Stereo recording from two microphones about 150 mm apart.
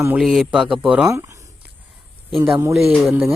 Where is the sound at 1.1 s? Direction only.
20° right (ahead or behind).